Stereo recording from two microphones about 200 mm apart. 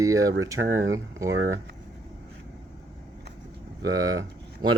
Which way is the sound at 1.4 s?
75° right (ahead or behind).